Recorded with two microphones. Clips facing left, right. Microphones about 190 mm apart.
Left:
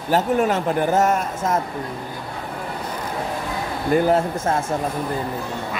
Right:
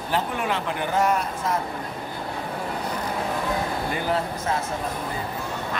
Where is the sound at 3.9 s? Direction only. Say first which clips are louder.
Left 13 dB; 45° left (ahead or behind).